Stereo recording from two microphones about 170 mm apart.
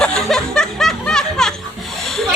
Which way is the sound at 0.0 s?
5° left (ahead or behind).